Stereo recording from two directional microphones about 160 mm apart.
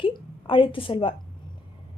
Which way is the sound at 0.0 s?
30° left (ahead or behind).